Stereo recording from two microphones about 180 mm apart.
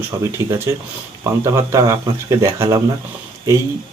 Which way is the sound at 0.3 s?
15° right (ahead or behind).